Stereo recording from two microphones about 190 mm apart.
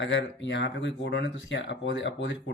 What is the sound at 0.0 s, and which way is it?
Speech, 70° left (ahead or behind).